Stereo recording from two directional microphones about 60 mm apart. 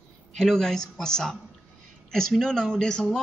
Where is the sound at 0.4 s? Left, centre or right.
Centre.